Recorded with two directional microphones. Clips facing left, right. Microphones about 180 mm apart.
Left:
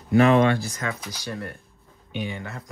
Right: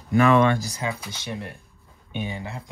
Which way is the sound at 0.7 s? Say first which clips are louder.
Right 1 dB; 30° right (ahead or behind).